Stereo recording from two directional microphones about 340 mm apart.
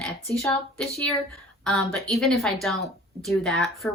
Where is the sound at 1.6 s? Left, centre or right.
Centre.